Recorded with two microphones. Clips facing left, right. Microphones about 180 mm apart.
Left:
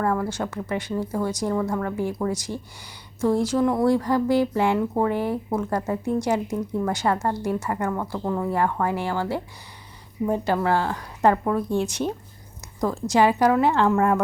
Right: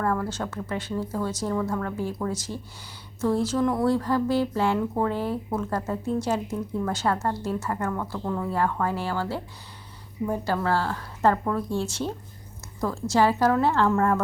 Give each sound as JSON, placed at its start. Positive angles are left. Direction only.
{"t": 0.0, "sound": "speech", "side_deg": 10}